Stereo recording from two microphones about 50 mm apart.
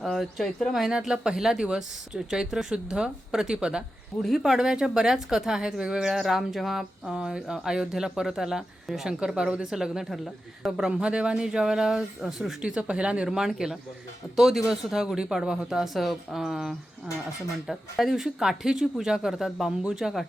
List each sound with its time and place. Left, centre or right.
0.0 s speech: centre
6.1 s speech: centre
7.0 s speech: centre
10.1 s speech: centre
10.8 s speech: centre
12.6 s speech: right
13.2 s speech: centre
17.7 s speech: centre